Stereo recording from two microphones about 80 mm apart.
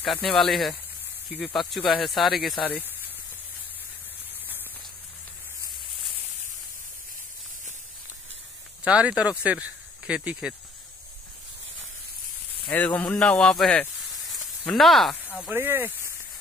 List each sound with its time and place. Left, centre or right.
0.0 s speech: centre
8.8 s speech: centre
12.6 s speech: left
14.7 s speech: centre
15.5 s speech: right